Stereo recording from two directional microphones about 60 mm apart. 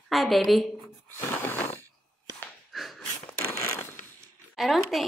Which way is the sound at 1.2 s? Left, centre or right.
Left.